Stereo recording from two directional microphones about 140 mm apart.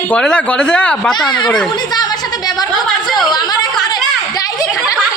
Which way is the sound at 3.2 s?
30° left (ahead or behind).